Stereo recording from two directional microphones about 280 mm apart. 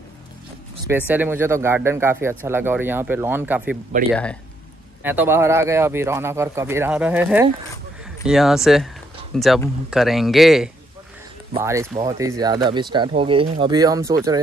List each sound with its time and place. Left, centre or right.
0.8 s speech: centre
5.0 s speech: centre